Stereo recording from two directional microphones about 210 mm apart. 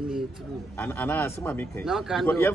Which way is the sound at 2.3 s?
10° left (ahead or behind).